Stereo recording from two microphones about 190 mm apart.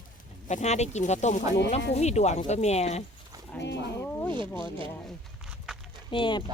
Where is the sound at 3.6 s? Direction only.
65° left (ahead or behind).